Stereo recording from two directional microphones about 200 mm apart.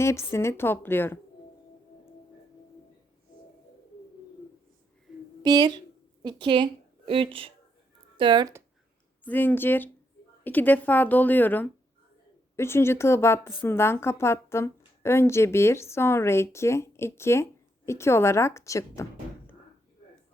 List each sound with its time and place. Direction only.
0.0 s a woman's voice: 15° left (ahead or behind)
5.4 s a woman's voice: 20° right (ahead or behind)
9.2 s a woman's voice: 10° left (ahead or behind)